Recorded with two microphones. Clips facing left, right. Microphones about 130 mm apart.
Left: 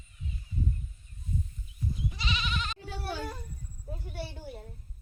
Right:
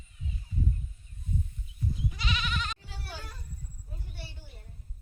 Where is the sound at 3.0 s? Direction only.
60° left (ahead or behind).